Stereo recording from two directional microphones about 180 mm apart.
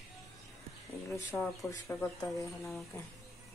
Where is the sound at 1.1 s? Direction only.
15° left (ahead or behind).